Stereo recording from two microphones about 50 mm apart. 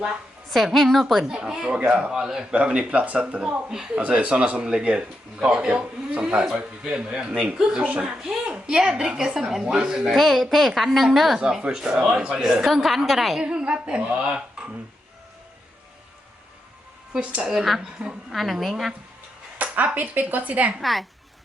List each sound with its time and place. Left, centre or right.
0.5 s a woman's voice: centre
1.2 s a woman's voice: centre
3.9 s a woman's voice: right
10.2 s a woman's voice: centre
11.6 s a woman's voice: centre
13.4 s speech: centre
17.1 s speech: right
17.4 s a woman's voice: centre
19.7 s speech: right
20.8 s a woman's voice: centre